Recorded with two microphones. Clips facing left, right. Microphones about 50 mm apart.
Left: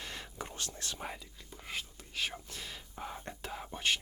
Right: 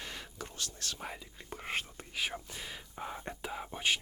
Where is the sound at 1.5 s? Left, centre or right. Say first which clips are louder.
Right 5 dB; right.